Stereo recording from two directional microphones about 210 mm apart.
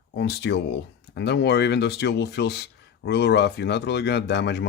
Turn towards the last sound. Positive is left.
turn(degrees=55)  # may be behind; listen again after turning